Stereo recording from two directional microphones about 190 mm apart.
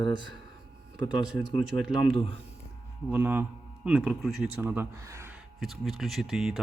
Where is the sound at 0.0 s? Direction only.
25° left (ahead or behind).